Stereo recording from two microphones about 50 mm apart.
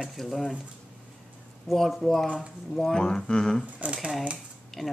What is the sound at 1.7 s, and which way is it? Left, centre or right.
Speech, centre.